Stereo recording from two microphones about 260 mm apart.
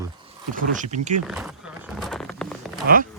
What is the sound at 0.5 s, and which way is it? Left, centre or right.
Speech, right.